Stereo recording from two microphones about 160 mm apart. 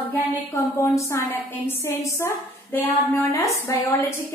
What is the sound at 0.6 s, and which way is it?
A woman's voice, 15° left (ahead or behind).